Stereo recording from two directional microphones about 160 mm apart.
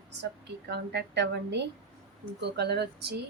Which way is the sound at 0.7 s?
90° right.